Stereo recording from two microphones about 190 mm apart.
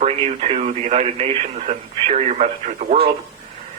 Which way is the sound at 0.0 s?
35° right (ahead or behind).